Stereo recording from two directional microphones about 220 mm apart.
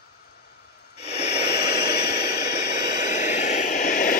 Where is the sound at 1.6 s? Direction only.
50° left (ahead or behind).